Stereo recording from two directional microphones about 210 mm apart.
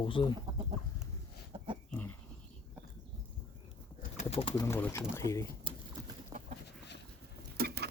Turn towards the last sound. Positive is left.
turn(degrees=-50)  # may be behind; listen again after turning